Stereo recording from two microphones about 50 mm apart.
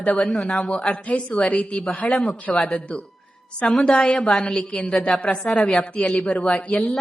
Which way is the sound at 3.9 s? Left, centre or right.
Centre.